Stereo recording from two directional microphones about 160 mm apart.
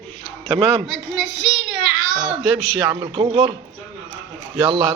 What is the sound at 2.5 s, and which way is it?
A man's voice, 25° right (ahead or behind).